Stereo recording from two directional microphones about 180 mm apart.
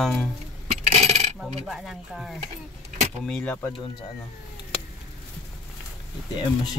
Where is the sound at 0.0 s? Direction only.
5° left (ahead or behind).